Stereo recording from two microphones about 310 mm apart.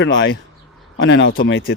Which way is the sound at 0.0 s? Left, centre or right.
Left.